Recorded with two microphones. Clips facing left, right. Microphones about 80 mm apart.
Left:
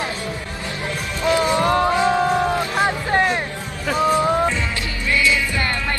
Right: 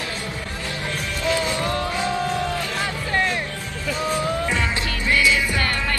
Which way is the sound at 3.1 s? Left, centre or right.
Left.